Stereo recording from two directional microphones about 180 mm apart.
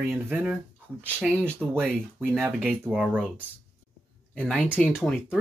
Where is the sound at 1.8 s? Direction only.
10° right (ahead or behind).